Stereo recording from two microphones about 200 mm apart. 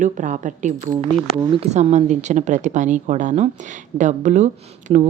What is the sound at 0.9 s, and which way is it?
Speech, 25° right (ahead or behind).